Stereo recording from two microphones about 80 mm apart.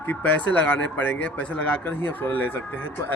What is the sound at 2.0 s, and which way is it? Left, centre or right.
Speech, left.